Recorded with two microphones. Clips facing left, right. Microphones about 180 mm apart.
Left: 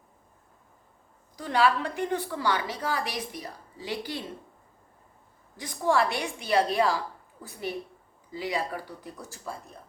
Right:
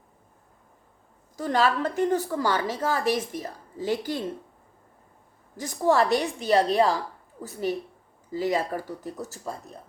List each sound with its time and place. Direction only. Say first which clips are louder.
1.4 s a woman's voice: right 1 dB; 45° right (ahead or behind)
5.5 s a woman's voice: right 3 dB; 40° right (ahead or behind)